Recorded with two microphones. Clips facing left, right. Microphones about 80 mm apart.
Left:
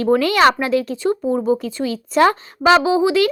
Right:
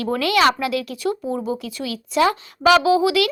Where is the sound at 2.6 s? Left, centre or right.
Left.